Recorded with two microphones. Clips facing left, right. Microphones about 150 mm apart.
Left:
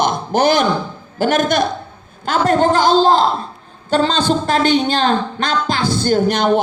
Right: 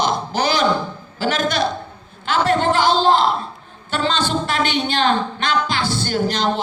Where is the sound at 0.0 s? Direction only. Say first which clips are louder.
Left 5 dB; 50° left (ahead or behind).